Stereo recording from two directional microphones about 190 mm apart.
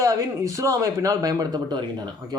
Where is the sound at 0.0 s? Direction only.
15° right (ahead or behind).